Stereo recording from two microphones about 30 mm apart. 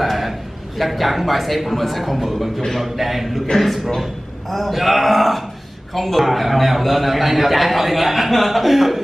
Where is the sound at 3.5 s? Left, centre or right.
Centre.